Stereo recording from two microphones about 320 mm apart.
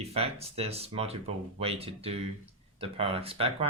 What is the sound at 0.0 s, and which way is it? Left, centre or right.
Speech, centre.